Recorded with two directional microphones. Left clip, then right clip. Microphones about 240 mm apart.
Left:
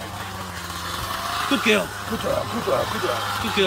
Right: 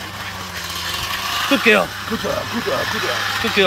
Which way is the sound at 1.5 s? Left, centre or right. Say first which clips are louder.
Right 6 dB; centre.